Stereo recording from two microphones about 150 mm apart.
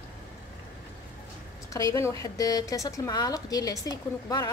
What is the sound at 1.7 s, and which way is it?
A woman's voice, 20° left (ahead or behind).